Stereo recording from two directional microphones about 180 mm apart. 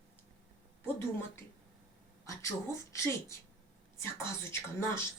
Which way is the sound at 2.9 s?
15° left (ahead or behind).